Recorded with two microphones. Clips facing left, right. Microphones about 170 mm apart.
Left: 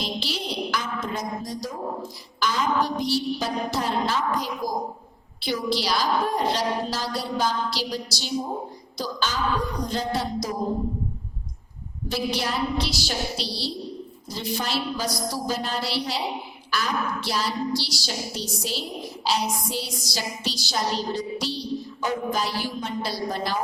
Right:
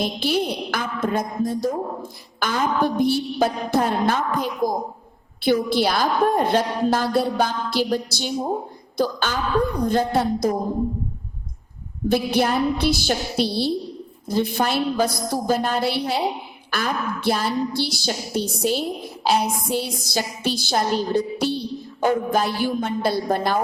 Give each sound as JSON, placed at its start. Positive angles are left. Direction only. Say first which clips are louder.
{"t": 0.0, "sound": "music", "louder": "right 8 dB", "side_deg": -55}
{"t": 5.4, "sound": "a woman's voice", "louder": "right 7 dB", "side_deg": -55}
{"t": 12.0, "sound": "music", "louder": "right 7 dB", "side_deg": -55}
{"t": 14.3, "sound": "a woman's voice", "louder": "right 8 dB", "side_deg": -55}